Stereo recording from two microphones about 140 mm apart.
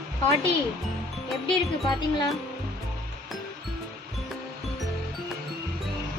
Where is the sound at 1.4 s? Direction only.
35° left (ahead or behind).